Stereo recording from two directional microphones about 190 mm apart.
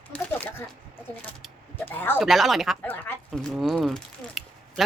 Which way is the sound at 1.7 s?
10° left (ahead or behind).